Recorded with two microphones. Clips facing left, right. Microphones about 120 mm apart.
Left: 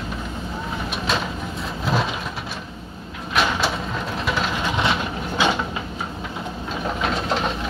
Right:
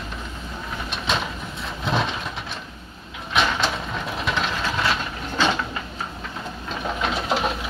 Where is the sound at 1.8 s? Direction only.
5° left (ahead or behind).